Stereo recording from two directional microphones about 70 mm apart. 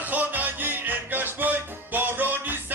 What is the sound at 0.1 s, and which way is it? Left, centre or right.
Music, right.